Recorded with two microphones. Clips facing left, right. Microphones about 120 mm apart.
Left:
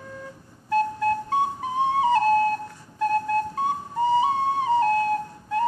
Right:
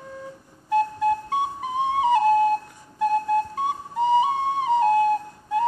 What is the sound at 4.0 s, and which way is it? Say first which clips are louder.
Flute: right 1 dB; 15° right (ahead or behind).